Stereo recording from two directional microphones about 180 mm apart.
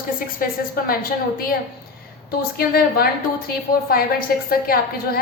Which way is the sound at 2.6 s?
55° left (ahead or behind).